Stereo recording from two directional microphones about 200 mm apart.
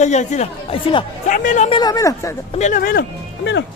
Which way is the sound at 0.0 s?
35° left (ahead or behind).